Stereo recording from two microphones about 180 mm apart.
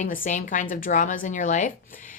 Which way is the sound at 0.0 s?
45° left (ahead or behind).